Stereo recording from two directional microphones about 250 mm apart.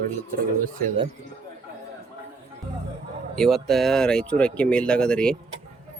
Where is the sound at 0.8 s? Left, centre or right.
Right.